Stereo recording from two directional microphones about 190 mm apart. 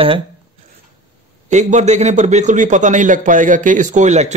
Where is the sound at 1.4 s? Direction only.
40° right (ahead or behind).